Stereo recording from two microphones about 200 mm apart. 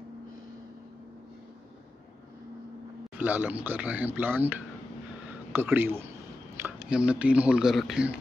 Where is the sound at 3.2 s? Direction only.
10° right (ahead or behind).